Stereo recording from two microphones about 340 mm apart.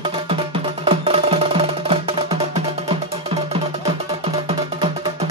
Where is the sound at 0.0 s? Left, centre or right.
Centre.